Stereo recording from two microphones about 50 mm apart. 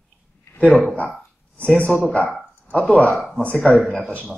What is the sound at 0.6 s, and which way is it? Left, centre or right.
Speech, left.